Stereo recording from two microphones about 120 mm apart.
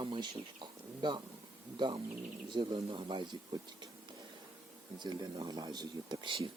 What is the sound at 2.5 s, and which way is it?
Speech, 35° right (ahead or behind).